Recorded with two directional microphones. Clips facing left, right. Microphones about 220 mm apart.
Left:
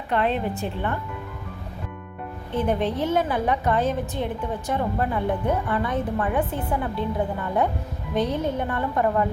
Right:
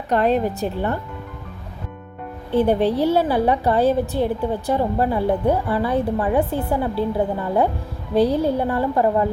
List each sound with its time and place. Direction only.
0.1 s a woman's voice: 40° right (ahead or behind)
2.5 s a woman's voice: 35° right (ahead or behind)
8.1 s a woman's voice: 35° right (ahead or behind)